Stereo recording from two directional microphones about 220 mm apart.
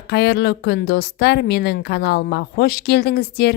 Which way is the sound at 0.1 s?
50° left (ahead or behind).